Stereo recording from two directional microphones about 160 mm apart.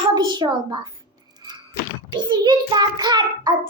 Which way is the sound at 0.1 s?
25° right (ahead or behind).